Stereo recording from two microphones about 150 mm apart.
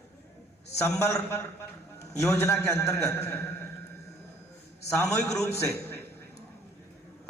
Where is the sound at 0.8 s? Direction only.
20° left (ahead or behind).